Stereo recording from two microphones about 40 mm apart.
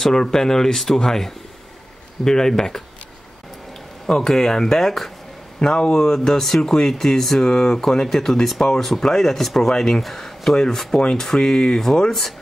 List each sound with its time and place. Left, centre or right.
0.0 s speech: centre
4.0 s speech: centre
5.6 s speech: centre
12.1 s speech: centre